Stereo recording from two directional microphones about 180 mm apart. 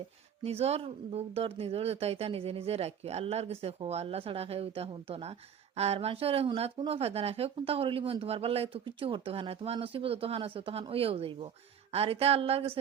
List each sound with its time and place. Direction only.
0.4 s speech: 35° right (ahead or behind)